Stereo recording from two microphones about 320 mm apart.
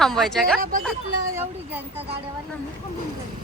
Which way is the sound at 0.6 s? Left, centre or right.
Right.